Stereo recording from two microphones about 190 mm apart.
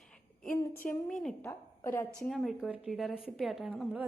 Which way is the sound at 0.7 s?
45° left (ahead or behind).